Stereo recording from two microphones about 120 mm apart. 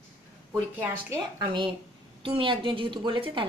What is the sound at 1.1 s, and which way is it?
A woman's voice, 35° right (ahead or behind).